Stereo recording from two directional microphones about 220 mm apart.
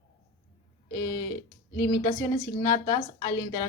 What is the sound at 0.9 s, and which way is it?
A woman's voice, 15° left (ahead or behind).